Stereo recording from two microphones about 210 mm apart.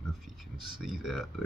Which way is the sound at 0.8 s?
Centre (ahead or behind).